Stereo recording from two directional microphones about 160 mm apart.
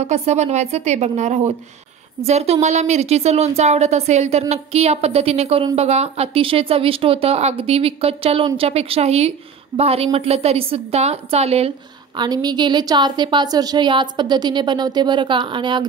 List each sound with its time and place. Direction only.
0.0 s a woman's voice: 45° right (ahead or behind)
12.2 s a woman's voice: 25° right (ahead or behind)